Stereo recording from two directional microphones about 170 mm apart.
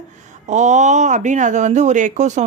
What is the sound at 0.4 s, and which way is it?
Speech, 45° right (ahead or behind).